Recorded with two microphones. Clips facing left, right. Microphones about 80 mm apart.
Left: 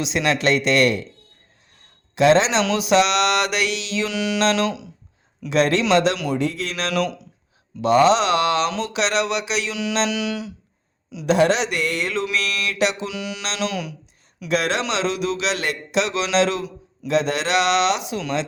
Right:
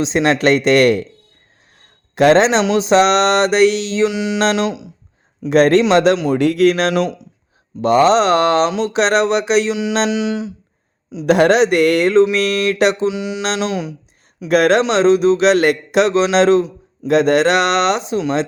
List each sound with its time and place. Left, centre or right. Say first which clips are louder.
0.0 s a sound: right 6 dB; right
0.3 s speech: right 5 dB; right
2.1 s speech: right 5 dB; right
2.6 s a sound: right 5 dB; right
4.0 s mantra: right 4 dB; right
5.5 s speech: right 7 dB; right
6.3 s speech: right 11 dB; right
6.9 s mantra: right 5 dB; right
7.8 s a sound: right 4 dB; right
10.1 s mantra: right 6 dB; right
11.3 s speech: right 6 dB; right
12.1 s a sound: right 11 dB; right
13.1 s mantra: right 9 dB; right
14.4 s speech: right 9 dB; right